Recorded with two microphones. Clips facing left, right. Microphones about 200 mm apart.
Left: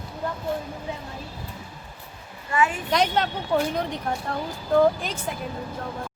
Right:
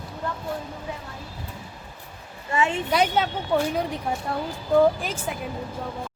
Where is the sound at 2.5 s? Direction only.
25° right (ahead or behind).